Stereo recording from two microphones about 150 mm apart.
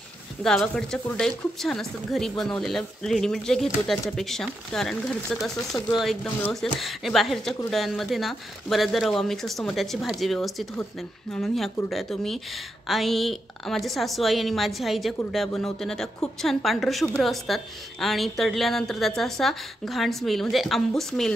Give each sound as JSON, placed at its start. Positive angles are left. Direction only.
{"t": 0.4, "sound": "a woman's voice", "side_deg": 5}